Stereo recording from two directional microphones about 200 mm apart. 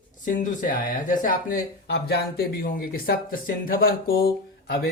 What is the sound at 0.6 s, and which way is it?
Speech, 40° left (ahead or behind).